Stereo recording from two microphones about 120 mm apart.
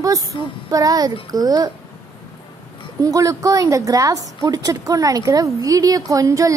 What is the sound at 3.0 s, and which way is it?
A woman's voice, 30° right (ahead or behind).